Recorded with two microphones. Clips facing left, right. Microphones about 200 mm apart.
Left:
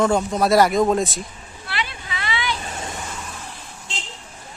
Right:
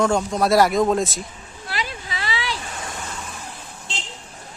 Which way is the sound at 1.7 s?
40° right (ahead or behind).